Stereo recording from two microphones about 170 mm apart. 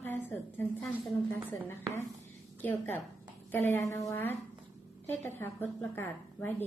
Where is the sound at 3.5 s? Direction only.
10° left (ahead or behind).